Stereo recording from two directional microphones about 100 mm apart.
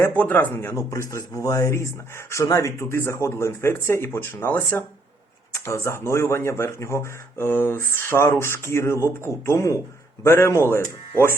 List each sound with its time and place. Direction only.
0.0 s speech: 15° left (ahead or behind)